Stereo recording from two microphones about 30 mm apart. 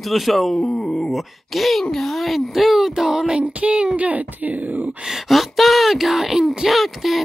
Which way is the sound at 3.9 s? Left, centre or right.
Right.